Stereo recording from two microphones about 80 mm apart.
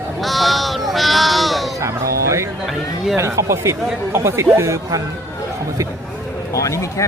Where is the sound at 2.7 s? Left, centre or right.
Centre.